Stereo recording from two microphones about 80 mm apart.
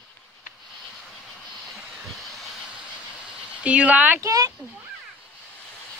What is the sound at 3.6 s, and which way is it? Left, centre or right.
Speech, centre.